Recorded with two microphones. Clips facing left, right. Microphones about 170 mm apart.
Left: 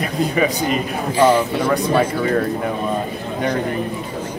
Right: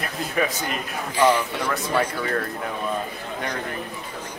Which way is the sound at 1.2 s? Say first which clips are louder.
Left 5 dB; 10° left (ahead or behind).